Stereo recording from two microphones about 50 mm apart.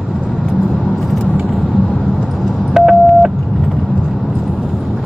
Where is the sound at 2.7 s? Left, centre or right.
Centre.